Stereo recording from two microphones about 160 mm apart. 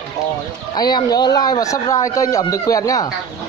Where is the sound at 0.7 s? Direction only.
25° left (ahead or behind).